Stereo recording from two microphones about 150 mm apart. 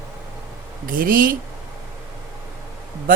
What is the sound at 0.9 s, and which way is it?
Speech, 70° right (ahead or behind).